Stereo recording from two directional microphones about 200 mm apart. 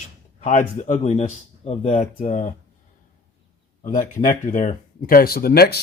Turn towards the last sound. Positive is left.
turn(degrees=50)  # may be behind; listen again after turning